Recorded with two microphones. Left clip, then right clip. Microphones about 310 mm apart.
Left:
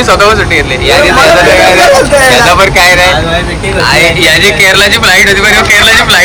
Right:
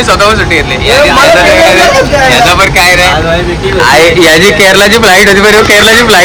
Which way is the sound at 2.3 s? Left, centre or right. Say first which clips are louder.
Even; centre.